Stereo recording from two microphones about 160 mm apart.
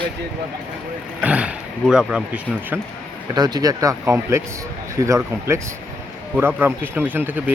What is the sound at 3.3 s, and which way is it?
Speech, 25° right (ahead or behind).